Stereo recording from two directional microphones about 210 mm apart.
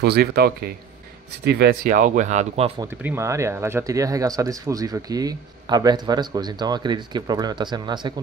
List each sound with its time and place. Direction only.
0.0 s a man's voice: 50° right (ahead or behind); by 2.7 s 30° right (ahead or behind)
2.8 s speech: 10° right (ahead or behind)